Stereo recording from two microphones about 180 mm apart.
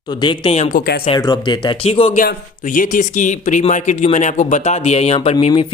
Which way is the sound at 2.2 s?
50° left (ahead or behind).